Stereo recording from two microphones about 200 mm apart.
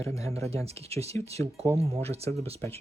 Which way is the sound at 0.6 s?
30° right (ahead or behind).